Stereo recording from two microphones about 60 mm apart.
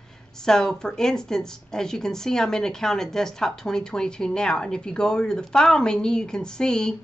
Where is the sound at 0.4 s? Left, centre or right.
Centre.